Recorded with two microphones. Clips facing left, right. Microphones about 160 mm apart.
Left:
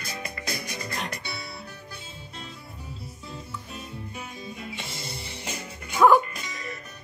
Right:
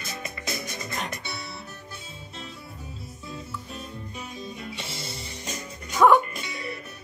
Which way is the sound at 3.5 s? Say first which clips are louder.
Right 1 dB; 5° left (ahead or behind).